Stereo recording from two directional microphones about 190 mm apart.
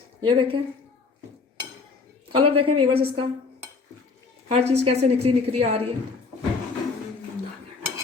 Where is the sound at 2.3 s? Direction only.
30° right (ahead or behind).